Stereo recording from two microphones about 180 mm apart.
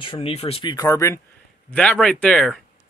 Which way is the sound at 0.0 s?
30° left (ahead or behind).